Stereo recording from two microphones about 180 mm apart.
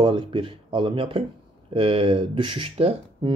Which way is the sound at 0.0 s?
25° right (ahead or behind).